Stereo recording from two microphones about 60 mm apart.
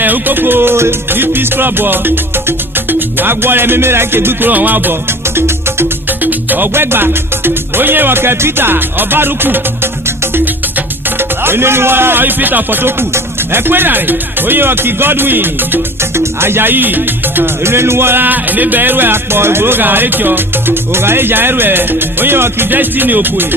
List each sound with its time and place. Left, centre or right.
0.0 s music: right
6.2 s music: right
11.2 s music: right
17.6 s music: right